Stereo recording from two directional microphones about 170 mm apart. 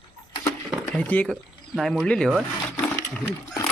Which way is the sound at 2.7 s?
20° left (ahead or behind).